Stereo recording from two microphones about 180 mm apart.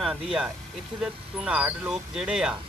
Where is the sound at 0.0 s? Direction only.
5° right (ahead or behind).